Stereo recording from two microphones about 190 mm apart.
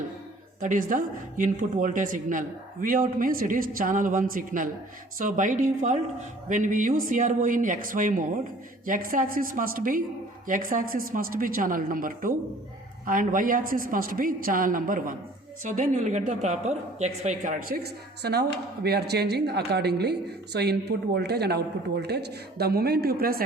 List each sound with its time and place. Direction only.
0.6 s a man's voice: 45° right (ahead or behind)